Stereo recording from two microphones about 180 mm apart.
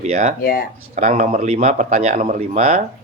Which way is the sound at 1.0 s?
40° right (ahead or behind).